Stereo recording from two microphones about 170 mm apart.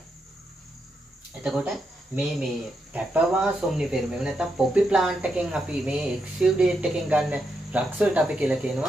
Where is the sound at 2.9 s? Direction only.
5° right (ahead or behind).